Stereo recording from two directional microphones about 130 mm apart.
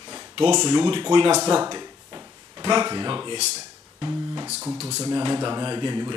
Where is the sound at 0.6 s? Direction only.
35° right (ahead or behind).